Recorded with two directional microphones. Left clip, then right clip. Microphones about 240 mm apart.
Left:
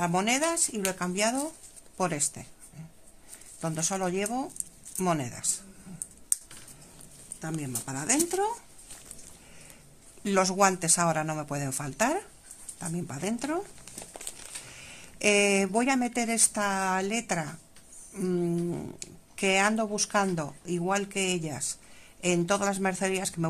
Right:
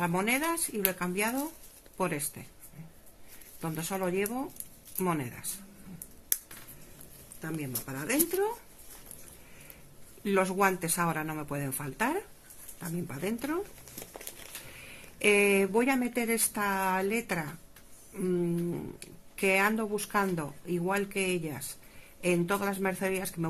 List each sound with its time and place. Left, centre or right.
0.0 s speech: left
3.6 s speech: left
7.4 s speech: left
10.3 s speech: left
15.2 s speech: left